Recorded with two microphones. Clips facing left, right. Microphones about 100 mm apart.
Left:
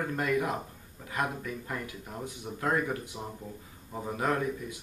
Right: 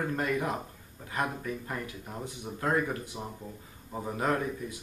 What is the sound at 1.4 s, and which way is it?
Speech, 15° right (ahead or behind).